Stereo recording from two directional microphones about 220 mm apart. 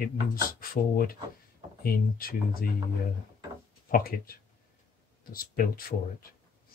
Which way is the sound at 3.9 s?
40° left (ahead or behind).